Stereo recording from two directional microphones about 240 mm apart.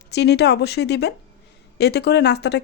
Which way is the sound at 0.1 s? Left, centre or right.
Left.